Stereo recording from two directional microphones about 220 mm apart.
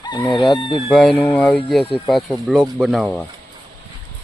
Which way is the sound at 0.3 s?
20° left (ahead or behind).